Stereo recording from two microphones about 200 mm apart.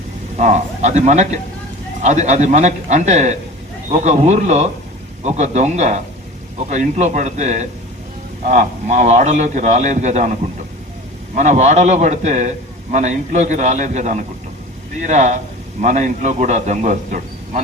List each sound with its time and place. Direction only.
0.3 s a man's voice: 35° right (ahead or behind)
11.3 s a man's voice: 35° right (ahead or behind)